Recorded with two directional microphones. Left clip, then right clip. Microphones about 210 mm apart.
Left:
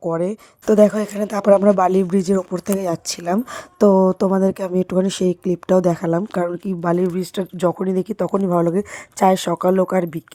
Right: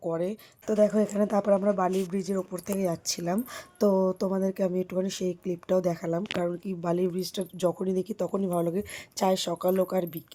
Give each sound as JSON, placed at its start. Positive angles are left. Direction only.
{"t": 0.0, "sound": "speech", "side_deg": 35}
{"t": 0.7, "sound": "a woman's voice", "side_deg": 50}